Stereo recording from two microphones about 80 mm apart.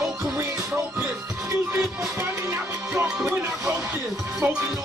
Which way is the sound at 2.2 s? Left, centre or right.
Right.